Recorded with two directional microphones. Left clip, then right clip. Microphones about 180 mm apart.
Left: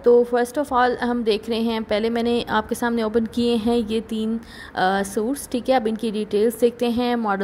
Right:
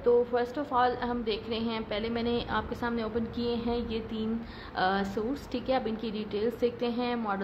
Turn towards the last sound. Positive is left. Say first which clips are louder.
# left 9 dB
turn(degrees=45)  # may be behind; listen again after turning